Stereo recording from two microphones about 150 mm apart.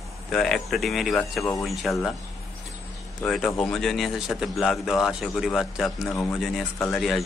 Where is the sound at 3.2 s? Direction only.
5° left (ahead or behind).